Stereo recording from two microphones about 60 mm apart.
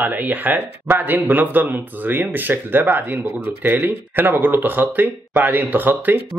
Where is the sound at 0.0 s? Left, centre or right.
Right.